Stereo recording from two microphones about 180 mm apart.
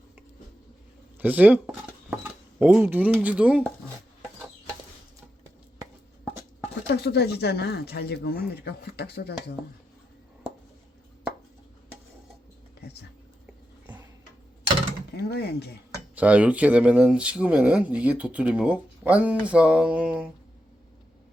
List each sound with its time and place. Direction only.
1.2 s dishes: 10° right (ahead or behind)
3.2 s speech: 5° right (ahead or behind)
6.8 s speech: 65° left (ahead or behind)
15.1 s speech: 60° left (ahead or behind)
16.1 s speech: 5° right (ahead or behind)